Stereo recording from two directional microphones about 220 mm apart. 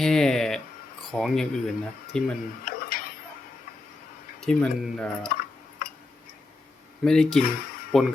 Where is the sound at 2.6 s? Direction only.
40° left (ahead or behind).